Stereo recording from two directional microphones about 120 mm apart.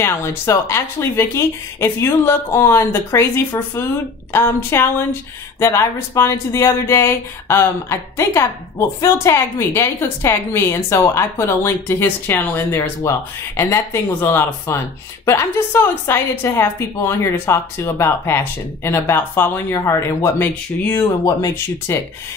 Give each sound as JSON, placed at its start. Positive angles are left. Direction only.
{"t": 0.0, "sound": "speech", "side_deg": 20}
{"t": 21.0, "sound": "speech", "side_deg": 30}